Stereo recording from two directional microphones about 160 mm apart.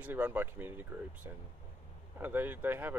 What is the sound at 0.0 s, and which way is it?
Speech, 10° right (ahead or behind).